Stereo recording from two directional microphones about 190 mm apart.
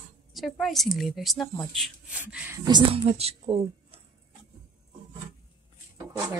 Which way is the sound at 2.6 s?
25° right (ahead or behind).